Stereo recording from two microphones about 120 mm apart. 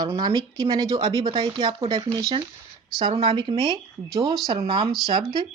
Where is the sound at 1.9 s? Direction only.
35° right (ahead or behind).